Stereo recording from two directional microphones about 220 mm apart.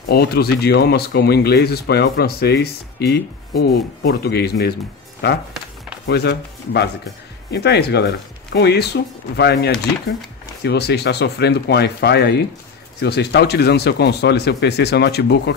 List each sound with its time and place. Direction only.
0.1 s speech: 45° left (ahead or behind)
6.0 s speech: 50° left (ahead or behind)